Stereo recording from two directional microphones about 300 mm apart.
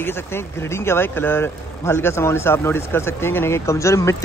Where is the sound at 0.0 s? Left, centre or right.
Centre.